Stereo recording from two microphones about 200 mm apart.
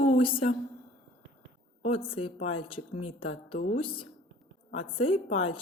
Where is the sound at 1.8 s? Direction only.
30° left (ahead or behind).